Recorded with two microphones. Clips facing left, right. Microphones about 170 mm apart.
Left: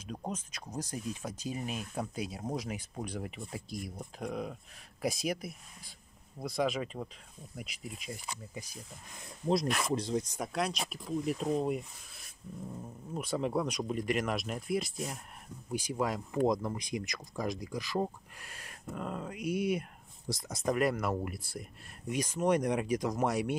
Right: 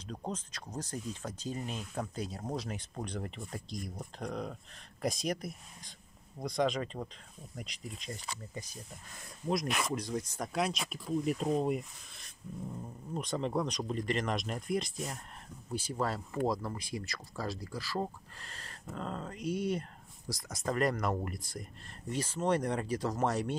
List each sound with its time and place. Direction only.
0.0 s speech: 10° left (ahead or behind)
10.5 s speech: centre (ahead or behind)
20.2 s speech: 25° left (ahead or behind)
20.7 s speech: 5° left (ahead or behind)